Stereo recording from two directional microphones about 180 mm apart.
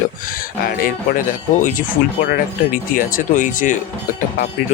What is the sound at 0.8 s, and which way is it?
Speech, 50° left (ahead or behind).